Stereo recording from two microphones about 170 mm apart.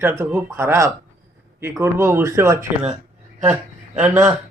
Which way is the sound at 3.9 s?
10° right (ahead or behind).